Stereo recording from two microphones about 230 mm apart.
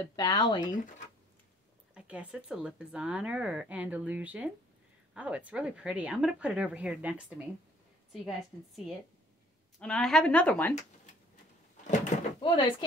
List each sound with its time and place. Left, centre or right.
0.0 s speech: centre
2.0 s speech: centre
12.4 s speech: left